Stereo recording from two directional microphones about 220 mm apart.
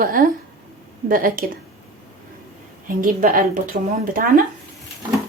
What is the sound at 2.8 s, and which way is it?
Speech, 35° right (ahead or behind).